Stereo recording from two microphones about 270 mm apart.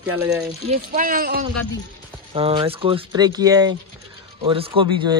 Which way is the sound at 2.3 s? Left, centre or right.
Right.